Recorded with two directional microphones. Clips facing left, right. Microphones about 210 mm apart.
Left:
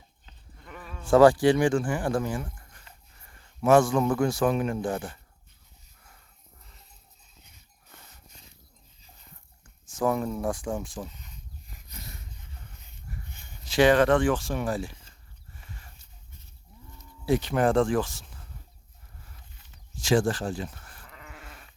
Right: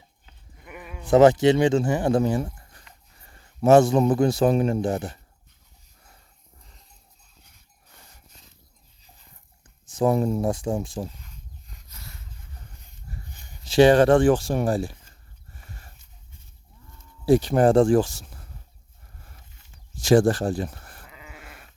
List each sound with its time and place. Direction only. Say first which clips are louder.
0.3 s a man's voice: right 2 dB; 10° right (ahead or behind)
4.4 s speech: right 5 dB; 35° right (ahead or behind)
10.0 s speech: right 5 dB; 30° right (ahead or behind)
11.9 s a sound: left 3 dB; 20° left (ahead or behind)
13.7 s speech: right 5 dB; 30° right (ahead or behind)
15.5 s a sound: right 1 dB; 40° right (ahead or behind)
17.2 s speech: right 6 dB; 35° right (ahead or behind)
20.1 s speech: right 6 dB; 40° right (ahead or behind)
20.7 s sheep: right 3 dB; 40° right (ahead or behind)
21.1 s goat: even; 5° right (ahead or behind)